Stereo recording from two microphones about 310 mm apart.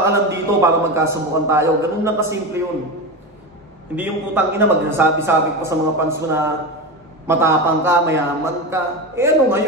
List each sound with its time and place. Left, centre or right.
0.0 s a man's voice: centre
3.9 s a man's voice: centre